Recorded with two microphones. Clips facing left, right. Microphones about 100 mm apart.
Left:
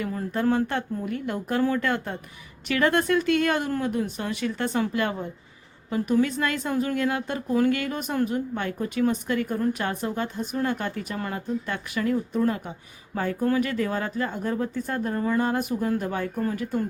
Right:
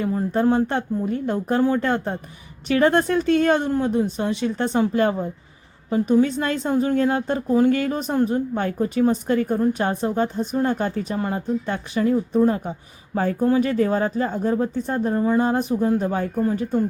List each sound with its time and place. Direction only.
0.0 s a woman's voice: 25° right (ahead or behind)